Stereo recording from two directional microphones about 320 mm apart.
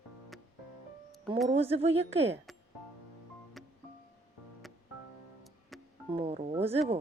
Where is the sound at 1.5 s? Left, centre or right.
Centre.